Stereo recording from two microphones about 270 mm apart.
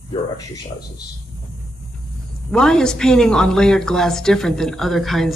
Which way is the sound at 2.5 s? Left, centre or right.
Centre.